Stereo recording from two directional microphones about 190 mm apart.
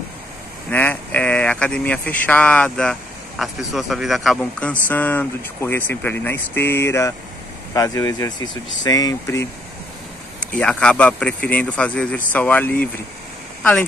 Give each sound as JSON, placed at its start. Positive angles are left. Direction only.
{"t": 0.7, "sound": "speech", "side_deg": 10}
{"t": 10.4, "sound": "speech", "side_deg": 5}